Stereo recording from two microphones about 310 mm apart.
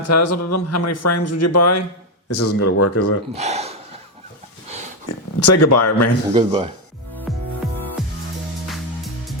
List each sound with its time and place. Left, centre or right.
0.1 s speech: left
3.3 s a sound: right
5.0 s speech: left
6.3 s speech: centre
7.3 s music: centre